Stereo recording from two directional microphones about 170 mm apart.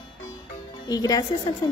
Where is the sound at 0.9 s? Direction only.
20° left (ahead or behind).